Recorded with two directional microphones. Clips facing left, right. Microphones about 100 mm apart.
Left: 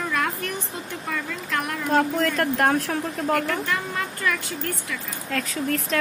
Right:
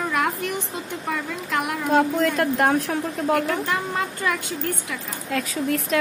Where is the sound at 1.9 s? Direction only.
5° right (ahead or behind).